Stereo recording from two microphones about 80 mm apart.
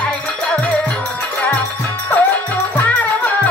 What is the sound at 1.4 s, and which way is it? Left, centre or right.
Music, centre.